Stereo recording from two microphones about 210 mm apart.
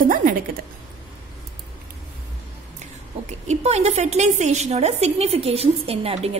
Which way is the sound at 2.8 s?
35° right (ahead or behind).